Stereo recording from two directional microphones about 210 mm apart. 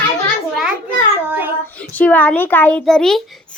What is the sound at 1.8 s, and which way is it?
A child's voice, 5° left (ahead or behind).